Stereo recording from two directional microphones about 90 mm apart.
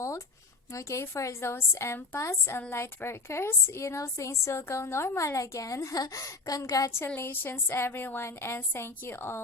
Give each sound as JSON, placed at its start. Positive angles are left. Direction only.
{"t": 0.7, "sound": "a woman's voice", "side_deg": 35}
{"t": 7.2, "sound": "a woman's voice", "side_deg": 25}